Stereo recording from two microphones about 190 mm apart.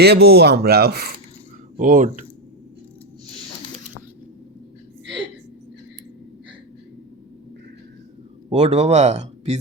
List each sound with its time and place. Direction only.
0.0 s speech: 60° right (ahead or behind)
1.8 s speech: 45° right (ahead or behind)
8.4 s speech: 35° right (ahead or behind)